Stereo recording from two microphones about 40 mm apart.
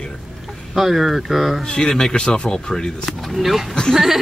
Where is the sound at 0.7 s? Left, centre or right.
Centre.